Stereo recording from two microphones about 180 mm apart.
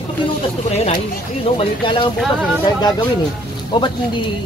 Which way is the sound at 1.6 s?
30° left (ahead or behind).